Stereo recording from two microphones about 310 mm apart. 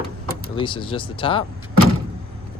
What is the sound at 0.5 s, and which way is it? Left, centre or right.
Speech, centre.